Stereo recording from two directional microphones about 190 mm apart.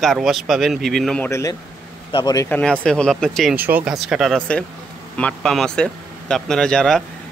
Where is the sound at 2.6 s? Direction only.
5° left (ahead or behind).